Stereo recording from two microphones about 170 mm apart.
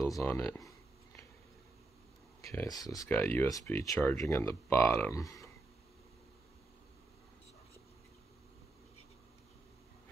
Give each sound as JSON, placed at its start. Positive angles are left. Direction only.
{"t": 0.0, "sound": "speech", "side_deg": 20}
{"t": 2.5, "sound": "speech", "side_deg": 20}
{"t": 3.1, "sound": "speech", "side_deg": 10}